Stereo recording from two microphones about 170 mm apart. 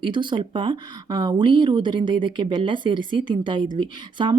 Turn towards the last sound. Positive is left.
turn(degrees=-30)  # may be behind; listen again after turning